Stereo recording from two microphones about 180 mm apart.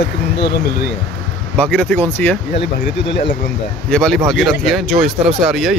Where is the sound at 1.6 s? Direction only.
5° left (ahead or behind).